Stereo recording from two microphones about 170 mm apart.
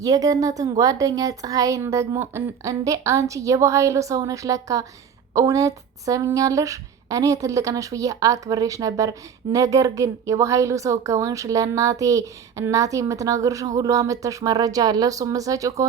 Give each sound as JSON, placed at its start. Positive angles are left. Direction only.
{"t": 0.0, "sound": "speech", "side_deg": -20}